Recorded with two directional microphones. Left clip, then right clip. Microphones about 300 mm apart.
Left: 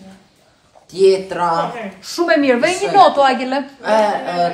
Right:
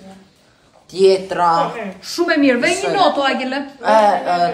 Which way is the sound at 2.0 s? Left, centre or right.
Centre.